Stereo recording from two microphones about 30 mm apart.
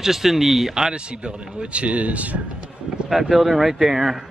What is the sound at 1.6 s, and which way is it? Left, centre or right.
Speech, right.